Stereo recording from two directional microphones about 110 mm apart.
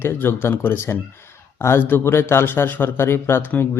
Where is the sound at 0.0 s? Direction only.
20° left (ahead or behind).